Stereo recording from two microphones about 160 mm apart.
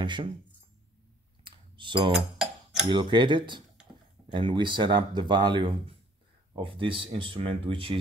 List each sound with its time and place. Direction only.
0.0 s speech: 30° right (ahead or behind)
1.4 s clicking: 30° right (ahead or behind)
2.4 s a sound: 5° right (ahead or behind)
2.9 s speech: 30° right (ahead or behind)